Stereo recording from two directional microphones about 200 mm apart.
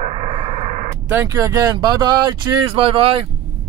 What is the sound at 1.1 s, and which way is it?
Speech, 15° right (ahead or behind).